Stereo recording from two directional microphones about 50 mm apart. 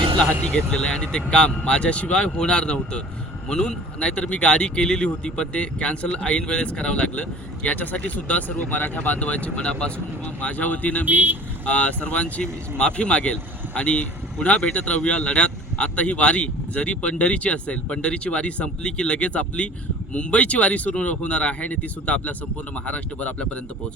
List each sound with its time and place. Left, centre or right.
0.7 s speech: centre
11.0 s speech: right
11.6 s speech: left